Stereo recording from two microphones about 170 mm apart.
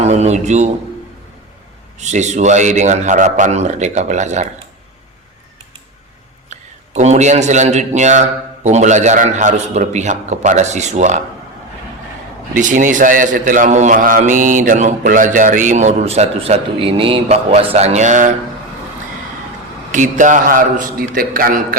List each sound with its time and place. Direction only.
0.0 s a man's voice: 40° right (ahead or behind)
2.0 s a man's voice: 45° right (ahead or behind)
6.5 s a man's voice: 40° right (ahead or behind)
12.5 s a man's voice: 50° right (ahead or behind)
19.9 s a man's voice: 50° right (ahead or behind)